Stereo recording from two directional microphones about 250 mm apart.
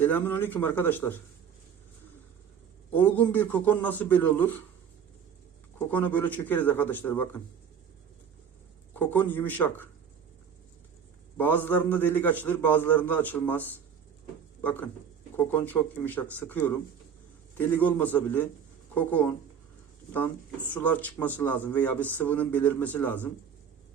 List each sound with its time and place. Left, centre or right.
0.0 s speech: centre
2.9 s speech: centre
5.9 s speech: centre
8.9 s speech: centre
11.3 s speech: centre
20.7 s speech: centre